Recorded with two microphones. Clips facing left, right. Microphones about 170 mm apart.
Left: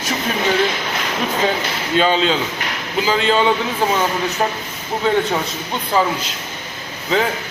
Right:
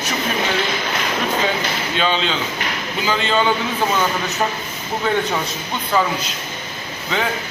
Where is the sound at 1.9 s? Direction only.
40° left (ahead or behind).